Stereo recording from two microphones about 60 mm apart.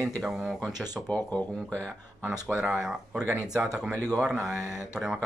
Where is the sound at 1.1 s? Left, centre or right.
Left.